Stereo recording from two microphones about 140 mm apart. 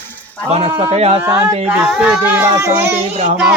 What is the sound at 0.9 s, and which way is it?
Speech, 50° right (ahead or behind).